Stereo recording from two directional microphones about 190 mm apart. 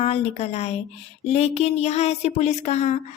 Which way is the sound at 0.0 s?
30° left (ahead or behind).